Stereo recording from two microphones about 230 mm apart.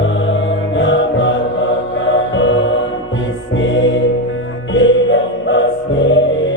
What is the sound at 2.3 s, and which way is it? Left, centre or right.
Music, left.